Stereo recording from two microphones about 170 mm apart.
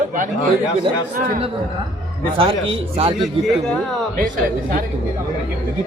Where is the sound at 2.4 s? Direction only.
30° right (ahead or behind).